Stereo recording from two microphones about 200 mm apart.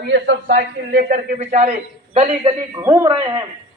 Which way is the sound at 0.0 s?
60° right (ahead or behind).